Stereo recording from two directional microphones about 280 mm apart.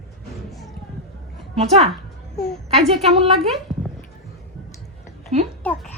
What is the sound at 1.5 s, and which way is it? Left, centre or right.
Speech, right.